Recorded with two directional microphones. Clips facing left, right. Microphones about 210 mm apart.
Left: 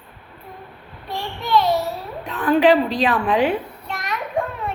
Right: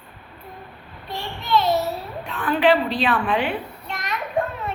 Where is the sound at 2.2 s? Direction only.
40° left (ahead or behind).